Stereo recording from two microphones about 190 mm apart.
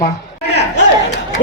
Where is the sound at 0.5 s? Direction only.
65° left (ahead or behind).